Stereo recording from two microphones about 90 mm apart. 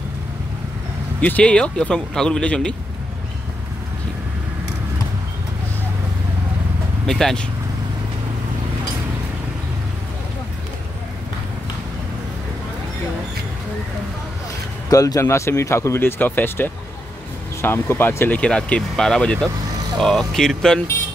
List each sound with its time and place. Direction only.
1.2 s speech: 15° left (ahead or behind)
7.1 s speech: 5° left (ahead or behind)
14.9 s speech: 40° left (ahead or behind); by 18.4 s 25° left (ahead or behind)
18.4 s speech: 10° left (ahead or behind)